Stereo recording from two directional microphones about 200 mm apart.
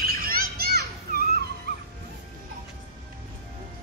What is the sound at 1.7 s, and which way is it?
Dog, 50° right (ahead or behind).